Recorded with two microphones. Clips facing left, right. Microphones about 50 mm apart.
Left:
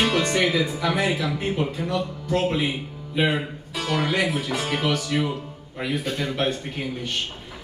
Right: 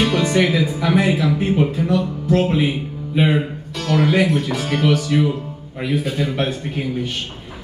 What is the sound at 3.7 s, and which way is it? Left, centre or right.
A man's voice, centre.